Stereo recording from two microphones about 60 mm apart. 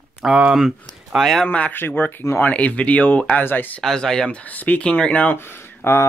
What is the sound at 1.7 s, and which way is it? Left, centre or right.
Speech, left.